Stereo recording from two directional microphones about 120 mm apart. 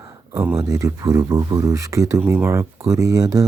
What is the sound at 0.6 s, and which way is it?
Speech, 30° right (ahead or behind).